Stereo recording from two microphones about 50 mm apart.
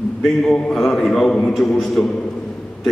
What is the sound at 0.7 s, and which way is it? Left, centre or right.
A man's voice, centre.